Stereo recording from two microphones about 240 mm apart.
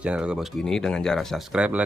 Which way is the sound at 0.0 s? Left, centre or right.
Centre.